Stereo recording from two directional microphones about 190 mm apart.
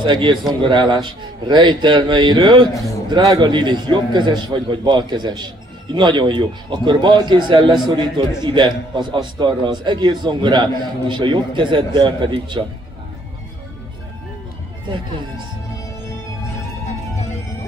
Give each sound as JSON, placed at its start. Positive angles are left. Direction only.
{"t": 0.0, "sound": "a man's voice", "side_deg": -25}
{"t": 2.7, "sound": "a man's voice", "side_deg": 15}
{"t": 3.1, "sound": "a man's voice", "side_deg": -20}